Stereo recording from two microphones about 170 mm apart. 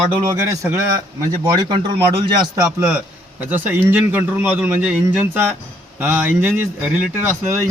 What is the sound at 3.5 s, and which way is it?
A man's voice, 10° right (ahead or behind).